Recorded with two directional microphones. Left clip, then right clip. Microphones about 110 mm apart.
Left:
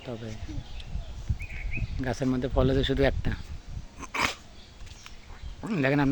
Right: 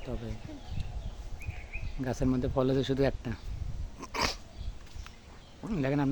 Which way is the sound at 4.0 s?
Centre (ahead or behind).